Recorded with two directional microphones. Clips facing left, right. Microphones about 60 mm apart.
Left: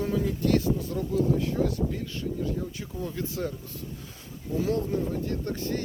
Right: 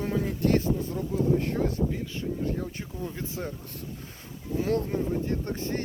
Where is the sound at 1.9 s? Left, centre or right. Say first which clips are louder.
Even; right.